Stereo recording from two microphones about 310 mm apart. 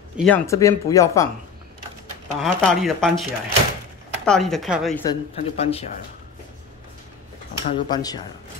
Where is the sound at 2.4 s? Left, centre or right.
Centre.